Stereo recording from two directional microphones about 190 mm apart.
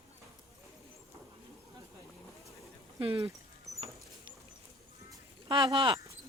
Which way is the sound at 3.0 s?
25° right (ahead or behind).